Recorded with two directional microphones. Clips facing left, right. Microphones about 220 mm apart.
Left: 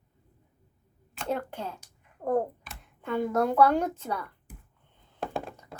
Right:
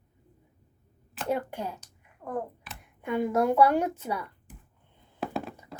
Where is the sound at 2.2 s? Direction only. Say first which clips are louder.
Left 7 dB; 40° left (ahead or behind).